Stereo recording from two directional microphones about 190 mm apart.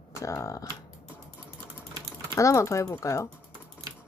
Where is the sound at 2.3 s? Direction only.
15° left (ahead or behind).